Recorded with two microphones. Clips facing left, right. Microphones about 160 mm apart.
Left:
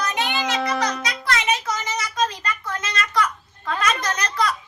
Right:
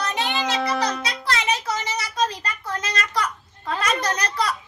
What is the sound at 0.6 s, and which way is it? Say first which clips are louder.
Music: even; centre (ahead or behind).